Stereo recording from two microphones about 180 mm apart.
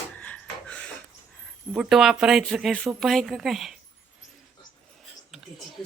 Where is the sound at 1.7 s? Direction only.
5° right (ahead or behind).